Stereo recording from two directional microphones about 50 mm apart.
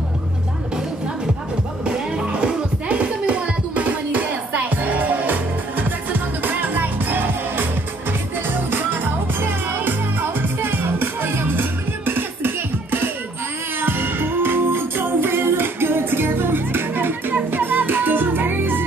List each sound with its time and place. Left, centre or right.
1.9 s music: centre; by 18.9 s right